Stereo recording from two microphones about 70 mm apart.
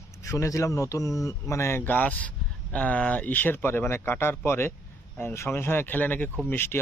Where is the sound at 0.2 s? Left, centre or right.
Left.